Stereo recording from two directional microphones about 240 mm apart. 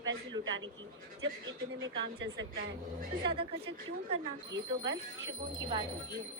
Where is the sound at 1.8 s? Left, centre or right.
Right.